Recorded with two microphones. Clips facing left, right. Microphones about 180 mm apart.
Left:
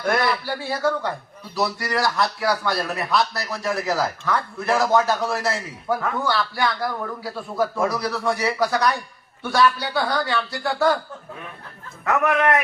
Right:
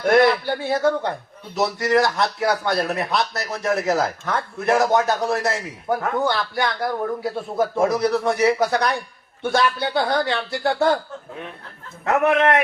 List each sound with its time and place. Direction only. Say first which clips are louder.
0.0 s speech: right 6 dB; 25° right (ahead or behind)
12.0 s speech: right 2 dB; 25° right (ahead or behind)